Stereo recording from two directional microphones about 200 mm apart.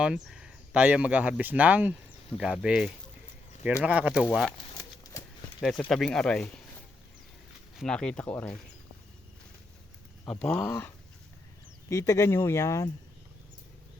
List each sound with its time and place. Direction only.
0.0 s speech: 5° right (ahead or behind)
4.8 s horse: 15° left (ahead or behind)
5.9 s speech: centre (ahead or behind)
7.8 s speech: 5° left (ahead or behind)
10.2 s speech: 5° left (ahead or behind)